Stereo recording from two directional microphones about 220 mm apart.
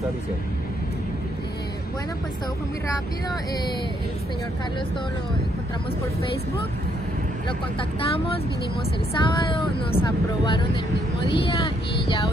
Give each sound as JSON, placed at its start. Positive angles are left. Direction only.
{"t": 9.2, "sound": "vehicle", "side_deg": 20}